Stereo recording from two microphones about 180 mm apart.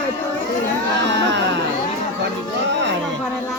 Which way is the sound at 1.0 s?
80° right.